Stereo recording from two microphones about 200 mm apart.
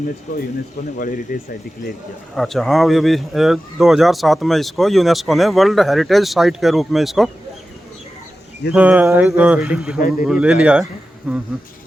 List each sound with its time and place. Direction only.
0.9 s speech: 45° left (ahead or behind)
2.3 s speech: centre (ahead or behind)
8.7 s a sound: 5° right (ahead or behind)
9.6 s speech: 5° right (ahead or behind)